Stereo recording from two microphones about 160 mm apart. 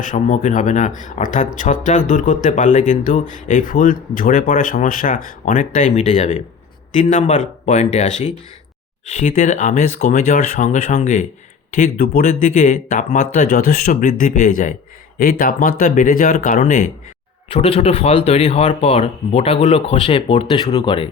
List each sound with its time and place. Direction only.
0.0 s speech: 55° left (ahead or behind)
11.7 s speech: 65° left (ahead or behind)
15.2 s speech: 65° left (ahead or behind)
17.5 s speech: 35° left (ahead or behind)